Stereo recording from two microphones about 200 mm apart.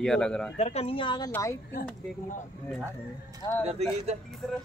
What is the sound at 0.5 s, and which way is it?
A woman's voice, 30° left (ahead or behind).